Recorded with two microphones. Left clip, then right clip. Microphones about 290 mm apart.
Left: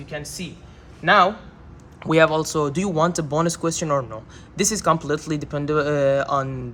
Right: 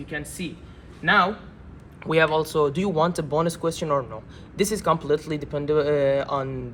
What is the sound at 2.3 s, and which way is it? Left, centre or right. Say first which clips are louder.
Speech: even; left.